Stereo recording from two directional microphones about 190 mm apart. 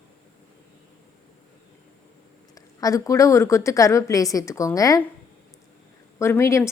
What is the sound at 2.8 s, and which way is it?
A woman's voice, 15° left (ahead or behind).